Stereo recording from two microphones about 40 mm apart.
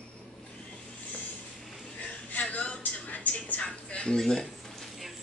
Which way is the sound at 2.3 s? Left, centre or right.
Left.